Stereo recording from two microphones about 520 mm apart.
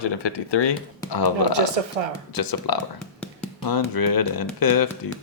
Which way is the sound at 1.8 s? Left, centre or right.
Right.